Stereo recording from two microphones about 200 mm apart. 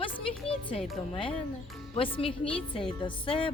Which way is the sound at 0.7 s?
Centre (ahead or behind).